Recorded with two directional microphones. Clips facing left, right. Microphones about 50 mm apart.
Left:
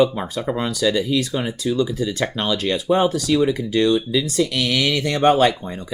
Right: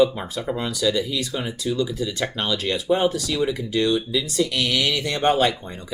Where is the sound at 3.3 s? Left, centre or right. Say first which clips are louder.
Left 4 dB; left.